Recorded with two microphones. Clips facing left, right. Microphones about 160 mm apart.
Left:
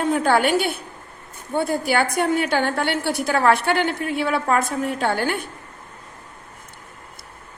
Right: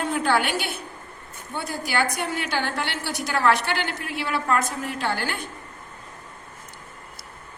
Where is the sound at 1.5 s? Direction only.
55° left (ahead or behind).